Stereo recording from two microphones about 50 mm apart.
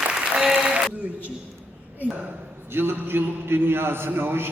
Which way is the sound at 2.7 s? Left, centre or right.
Right.